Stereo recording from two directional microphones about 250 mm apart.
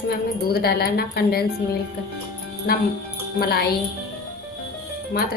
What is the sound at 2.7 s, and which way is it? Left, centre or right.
Speech, left.